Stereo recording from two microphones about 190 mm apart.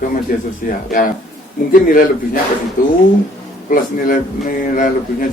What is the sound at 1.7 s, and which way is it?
A man's voice, 45° left (ahead or behind).